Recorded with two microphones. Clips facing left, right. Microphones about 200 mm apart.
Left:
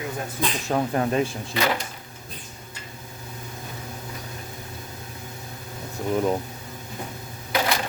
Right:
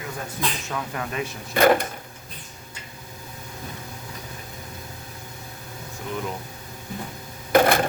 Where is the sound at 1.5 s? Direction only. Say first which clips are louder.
Right 8 dB; 50° right (ahead or behind).